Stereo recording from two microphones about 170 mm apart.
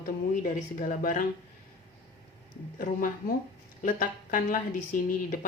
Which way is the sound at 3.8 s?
50° left (ahead or behind).